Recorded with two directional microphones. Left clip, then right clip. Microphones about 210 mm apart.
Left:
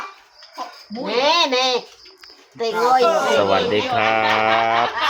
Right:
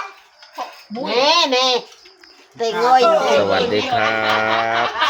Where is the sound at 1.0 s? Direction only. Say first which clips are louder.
Right 2 dB; centre (ahead or behind).